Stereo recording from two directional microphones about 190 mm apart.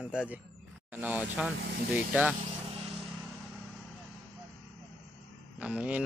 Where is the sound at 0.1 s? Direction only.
5° right (ahead or behind).